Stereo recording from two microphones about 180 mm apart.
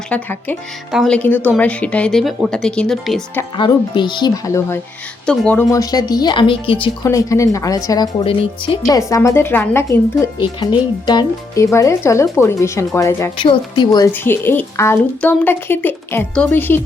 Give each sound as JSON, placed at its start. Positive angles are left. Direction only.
{"t": 0.1, "sound": "speech", "side_deg": 10}
{"t": 3.6, "sound": "speech", "side_deg": 25}
{"t": 5.2, "sound": "speech", "side_deg": 5}
{"t": 7.1, "sound": "speech", "side_deg": 15}
{"t": 8.9, "sound": "speech", "side_deg": 20}
{"t": 10.4, "sound": "speech", "side_deg": 25}
{"t": 13.4, "sound": "speech", "side_deg": 25}
{"t": 14.1, "sound": "speech", "side_deg": 10}